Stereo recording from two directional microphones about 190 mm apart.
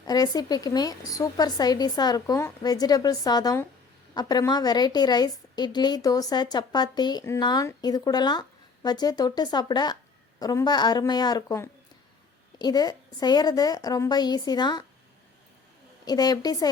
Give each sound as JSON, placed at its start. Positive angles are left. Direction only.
{"t": 0.0, "sound": "a woman's voice", "side_deg": 20}
{"t": 16.0, "sound": "a woman's voice", "side_deg": 20}